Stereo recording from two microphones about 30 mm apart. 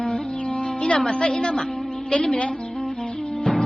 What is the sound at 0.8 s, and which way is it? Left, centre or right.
Speech, left.